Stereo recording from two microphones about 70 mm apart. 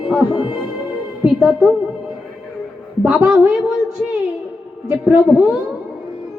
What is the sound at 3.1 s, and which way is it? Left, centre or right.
Speech, right.